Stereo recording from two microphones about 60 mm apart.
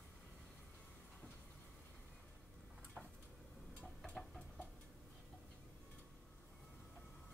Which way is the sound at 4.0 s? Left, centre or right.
Centre.